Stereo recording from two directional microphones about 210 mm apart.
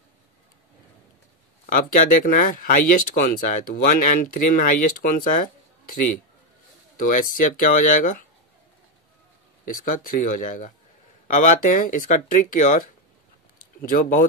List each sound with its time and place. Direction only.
1.7 s speech: 40° left (ahead or behind)
9.7 s speech: 40° left (ahead or behind)